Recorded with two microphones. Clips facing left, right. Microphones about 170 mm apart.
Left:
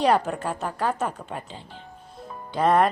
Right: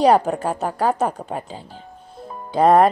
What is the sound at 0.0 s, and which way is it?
Speech, 35° right (ahead or behind).